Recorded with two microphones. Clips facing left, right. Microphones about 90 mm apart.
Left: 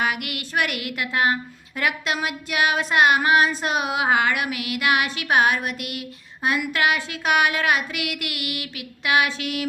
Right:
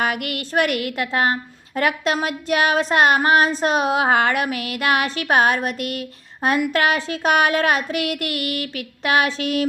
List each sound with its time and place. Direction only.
0.0 s a woman's voice: 40° right (ahead or behind)